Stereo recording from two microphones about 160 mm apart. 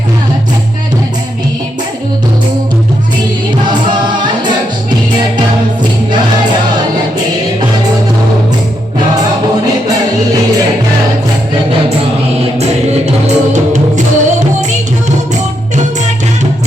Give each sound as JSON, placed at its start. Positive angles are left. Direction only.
{"t": 12.5, "sound": "music", "side_deg": -40}